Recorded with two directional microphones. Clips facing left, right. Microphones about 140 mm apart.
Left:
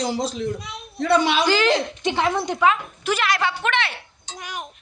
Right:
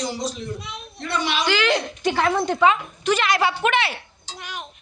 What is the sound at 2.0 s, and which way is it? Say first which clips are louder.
A woman's voice: right 1 dB; 20° left (ahead or behind).